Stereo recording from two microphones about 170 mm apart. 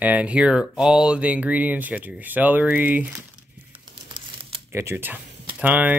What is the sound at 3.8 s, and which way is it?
Crumpling, 25° right (ahead or behind).